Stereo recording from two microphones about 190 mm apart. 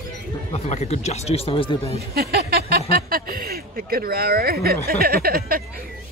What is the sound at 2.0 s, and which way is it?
Speech, 55° right (ahead or behind).